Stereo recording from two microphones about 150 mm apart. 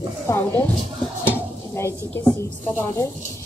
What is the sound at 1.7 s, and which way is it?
A woman's voice, 20° left (ahead or behind).